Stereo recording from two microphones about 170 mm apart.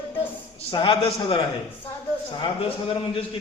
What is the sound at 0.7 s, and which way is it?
A man's voice, 30° left (ahead or behind).